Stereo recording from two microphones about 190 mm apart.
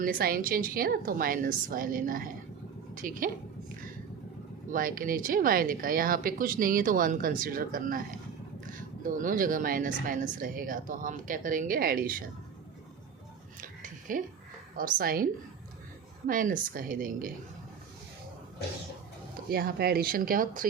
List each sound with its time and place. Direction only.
0.0 s a woman's voice: 50° right (ahead or behind)
4.7 s speech: 45° right (ahead or behind)
9.0 s speech: 45° right (ahead or behind)
13.6 s a sound: 45° right (ahead or behind)
14.8 s speech: 50° right (ahead or behind)
19.5 s speech: 50° right (ahead or behind)